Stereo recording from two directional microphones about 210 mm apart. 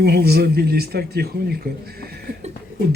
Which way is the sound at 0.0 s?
50° right (ahead or behind).